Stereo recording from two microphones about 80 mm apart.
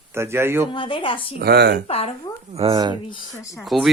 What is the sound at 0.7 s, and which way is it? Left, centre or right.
Speech, left.